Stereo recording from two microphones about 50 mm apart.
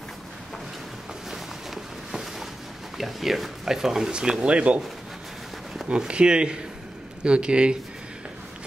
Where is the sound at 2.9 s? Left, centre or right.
Centre; by 4.8 s right.